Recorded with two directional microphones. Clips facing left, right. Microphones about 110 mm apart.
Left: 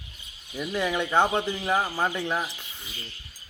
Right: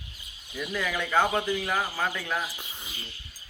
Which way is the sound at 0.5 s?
25° left (ahead or behind).